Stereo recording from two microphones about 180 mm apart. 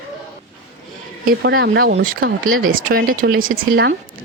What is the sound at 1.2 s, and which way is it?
Speech, 80° right.